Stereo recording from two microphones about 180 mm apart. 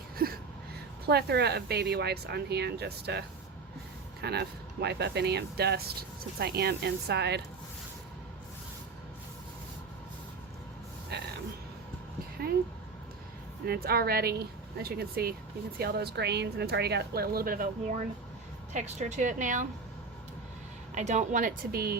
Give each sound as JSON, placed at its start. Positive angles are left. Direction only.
{"t": 0.2, "sound": "a sound", "side_deg": -55}
{"t": 1.0, "sound": "speech", "side_deg": -65}
{"t": 11.1, "sound": "a sound", "side_deg": -65}
{"t": 13.7, "sound": "speech", "side_deg": -60}
{"t": 18.7, "sound": "a woman's voice", "side_deg": -40}
{"t": 20.9, "sound": "speech", "side_deg": -40}